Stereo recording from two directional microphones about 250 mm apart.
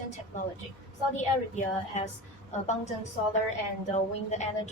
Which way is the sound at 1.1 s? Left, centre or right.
Left.